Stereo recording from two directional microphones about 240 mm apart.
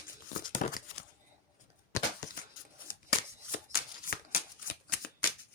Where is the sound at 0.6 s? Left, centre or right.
Left.